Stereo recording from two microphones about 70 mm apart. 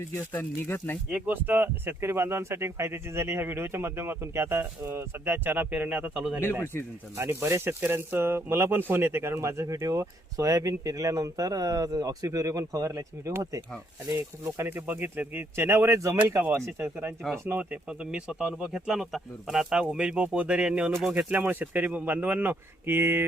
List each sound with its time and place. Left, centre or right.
0.2 s speech: left
1.1 s speech: right
6.4 s speech: left
7.2 s speech: right
14.7 s speech: right
17.6 s speech: centre; by 23.2 s right